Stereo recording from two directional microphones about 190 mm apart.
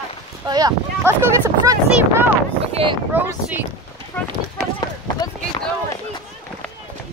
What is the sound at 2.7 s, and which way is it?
Speech, 30° right (ahead or behind).